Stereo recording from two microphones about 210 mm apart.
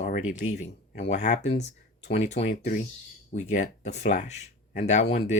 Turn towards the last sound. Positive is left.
turn(degrees=35)  # may be behind; listen again after turning